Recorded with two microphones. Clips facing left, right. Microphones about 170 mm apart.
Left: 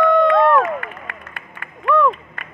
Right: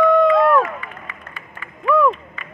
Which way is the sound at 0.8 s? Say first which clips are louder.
Left 2 dB; 60° left (ahead or behind).